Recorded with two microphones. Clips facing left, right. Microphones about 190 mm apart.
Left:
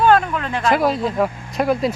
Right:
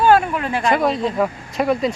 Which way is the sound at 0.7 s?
Centre (ahead or behind).